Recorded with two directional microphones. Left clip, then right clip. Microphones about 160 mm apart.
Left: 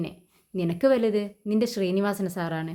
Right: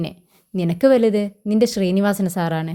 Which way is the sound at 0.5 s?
50° right (ahead or behind).